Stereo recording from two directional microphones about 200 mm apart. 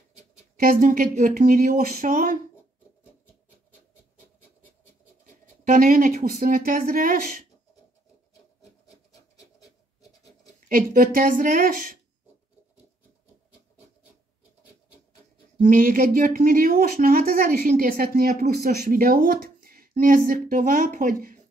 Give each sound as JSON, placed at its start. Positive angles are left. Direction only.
{"t": 0.6, "sound": "speech", "side_deg": -40}
{"t": 5.6, "sound": "speech", "side_deg": -40}
{"t": 10.7, "sound": "speech", "side_deg": -45}
{"t": 15.6, "sound": "speech", "side_deg": -45}